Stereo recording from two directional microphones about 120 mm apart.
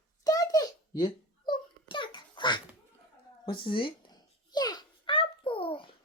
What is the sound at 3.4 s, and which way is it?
Babbling, 45° left (ahead or behind).